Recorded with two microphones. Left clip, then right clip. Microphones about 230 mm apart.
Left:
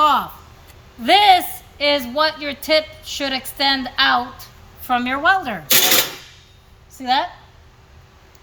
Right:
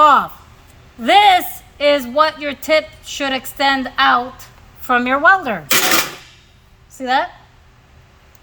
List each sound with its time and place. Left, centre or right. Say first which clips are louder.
0.0 s a sound: right 5 dB; centre
1.0 s a woman's voice: right 2 dB; centre
6.9 s a woman's voice: right 2 dB; centre